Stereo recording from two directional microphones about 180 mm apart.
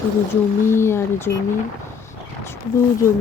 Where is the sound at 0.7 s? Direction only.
15° left (ahead or behind).